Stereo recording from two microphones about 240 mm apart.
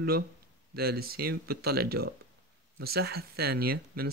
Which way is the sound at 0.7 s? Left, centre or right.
Right.